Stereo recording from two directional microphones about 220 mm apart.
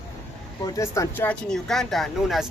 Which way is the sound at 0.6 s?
15° left (ahead or behind).